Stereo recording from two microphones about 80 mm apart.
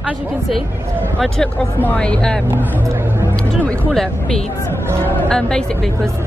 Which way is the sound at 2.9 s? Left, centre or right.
Right.